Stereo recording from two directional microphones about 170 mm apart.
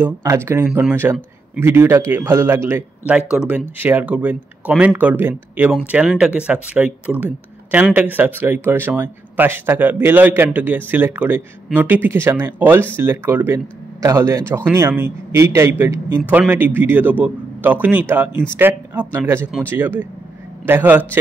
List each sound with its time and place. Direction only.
0.0 s speech: 15° right (ahead or behind)